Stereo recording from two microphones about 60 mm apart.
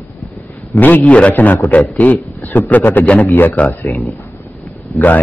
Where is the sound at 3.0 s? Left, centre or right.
Centre.